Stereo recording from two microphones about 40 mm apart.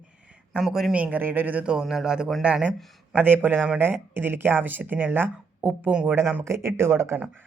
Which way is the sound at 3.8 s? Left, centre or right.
Right.